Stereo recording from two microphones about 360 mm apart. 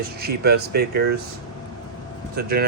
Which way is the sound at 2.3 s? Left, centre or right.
Right.